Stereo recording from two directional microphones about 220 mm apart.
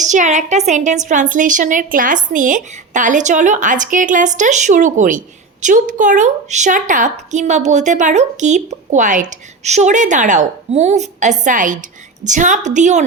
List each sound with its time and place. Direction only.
0.0 s a woman's voice: 35° right (ahead or behind)